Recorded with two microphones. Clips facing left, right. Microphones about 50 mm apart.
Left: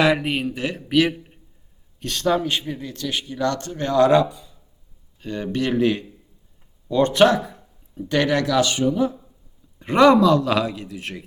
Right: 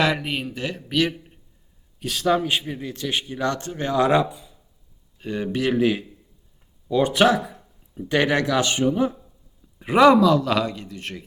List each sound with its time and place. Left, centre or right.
0.0 s a man's voice: centre
2.0 s a man's voice: centre; by 9.1 s right
9.7 s a man's voice: centre